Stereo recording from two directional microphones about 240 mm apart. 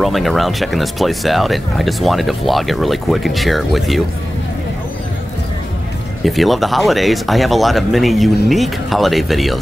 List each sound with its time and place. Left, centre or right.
0.0 s speech: centre
6.2 s speech: centre